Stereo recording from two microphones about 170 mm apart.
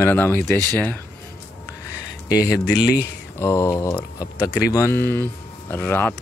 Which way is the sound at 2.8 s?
75° left (ahead or behind).